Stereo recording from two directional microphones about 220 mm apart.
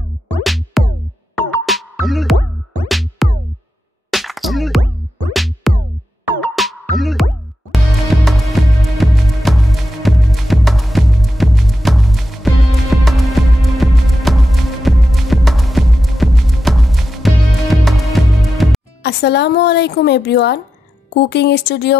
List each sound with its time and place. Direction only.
0.4 s music: centre (ahead or behind)
19.0 s speech: 50° left (ahead or behind)